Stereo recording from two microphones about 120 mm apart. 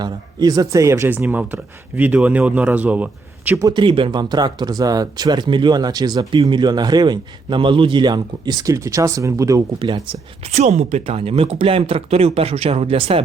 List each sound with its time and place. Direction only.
0.0 s speech: 35° right (ahead or behind); by 3.6 s 15° right (ahead or behind)
3.6 s speech: 40° right (ahead or behind)
9.7 s speech: 45° right (ahead or behind)
10.4 s speech: 70° right (ahead or behind); by 13.2 s 55° right (ahead or behind)